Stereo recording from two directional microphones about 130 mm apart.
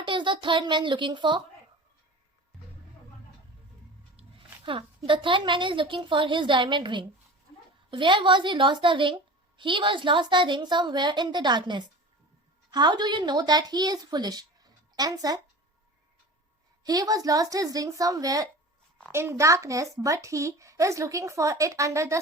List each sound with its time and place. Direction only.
0.0 s a child's voice: 40° right (ahead or behind)
4.2 s a woman's voice: 40° right (ahead or behind)
16.8 s speech: 30° right (ahead or behind)